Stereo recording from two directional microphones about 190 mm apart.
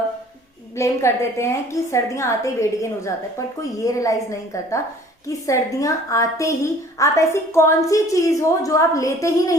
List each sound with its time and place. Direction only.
0.8 s a woman's voice: 15° left (ahead or behind)